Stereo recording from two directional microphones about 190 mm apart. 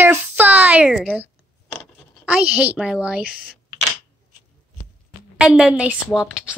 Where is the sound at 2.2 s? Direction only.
5° right (ahead or behind).